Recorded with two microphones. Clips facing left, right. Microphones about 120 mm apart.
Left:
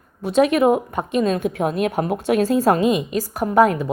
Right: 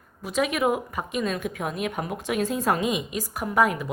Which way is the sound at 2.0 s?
50° left (ahead or behind).